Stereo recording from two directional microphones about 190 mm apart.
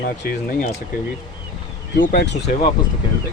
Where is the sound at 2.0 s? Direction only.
60° left (ahead or behind).